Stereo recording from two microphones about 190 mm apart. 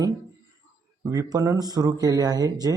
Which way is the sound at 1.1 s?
15° right (ahead or behind).